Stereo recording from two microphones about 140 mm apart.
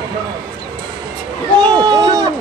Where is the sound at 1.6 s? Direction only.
30° right (ahead or behind).